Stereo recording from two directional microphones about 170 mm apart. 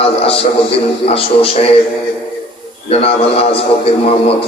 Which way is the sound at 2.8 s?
35° left (ahead or behind).